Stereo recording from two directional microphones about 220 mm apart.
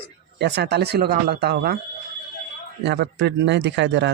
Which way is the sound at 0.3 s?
50° right (ahead or behind).